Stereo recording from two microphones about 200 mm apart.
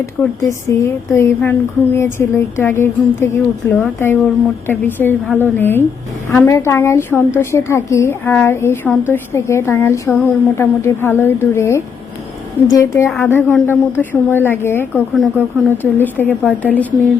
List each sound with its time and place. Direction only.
0.2 s a woman's voice: 10° left (ahead or behind)
13.1 s a woman's voice: centre (ahead or behind)
15.1 s a woman's voice: centre (ahead or behind)